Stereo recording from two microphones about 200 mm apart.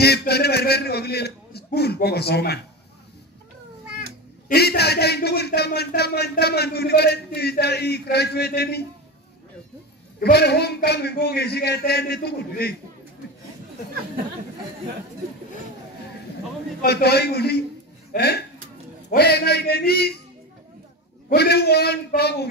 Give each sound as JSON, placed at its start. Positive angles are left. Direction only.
{"t": 0.0, "sound": "speech", "side_deg": 55}
{"t": 4.5, "sound": "speech", "side_deg": 55}
{"t": 10.2, "sound": "speech", "side_deg": 55}
{"t": 16.8, "sound": "speech", "side_deg": 55}
{"t": 21.3, "sound": "speech", "side_deg": 50}